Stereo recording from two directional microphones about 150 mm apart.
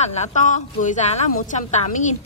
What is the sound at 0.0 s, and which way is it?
A woman's voice, 50° left (ahead or behind).